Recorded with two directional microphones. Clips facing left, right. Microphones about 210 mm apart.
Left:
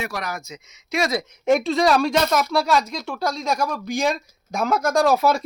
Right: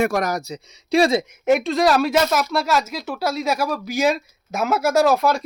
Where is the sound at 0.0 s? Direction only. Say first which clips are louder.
Right 9 dB; 45° right (ahead or behind); by 1.2 s 30° right (ahead or behind).